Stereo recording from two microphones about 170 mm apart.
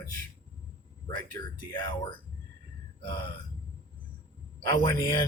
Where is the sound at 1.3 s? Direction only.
25° left (ahead or behind).